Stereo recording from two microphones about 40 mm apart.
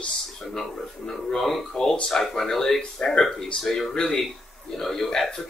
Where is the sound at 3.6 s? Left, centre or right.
Centre.